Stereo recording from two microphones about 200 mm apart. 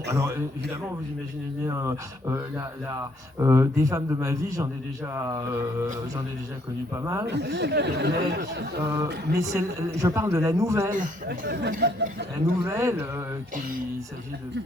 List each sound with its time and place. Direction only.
0.1 s a man's voice: 15° right (ahead or behind)
6.9 s a man's voice: 15° right (ahead or behind)
7.3 s speech: 60° right (ahead or behind)
8.8 s a man's voice: 15° right (ahead or behind)
9.0 s speech: 55° right (ahead or behind)
9.4 s a man's voice: 15° right (ahead or behind)
10.9 s a man's voice: 40° right (ahead or behind)
11.8 s speech: 55° right (ahead or behind)
12.6 s a man's voice: 15° right (ahead or behind)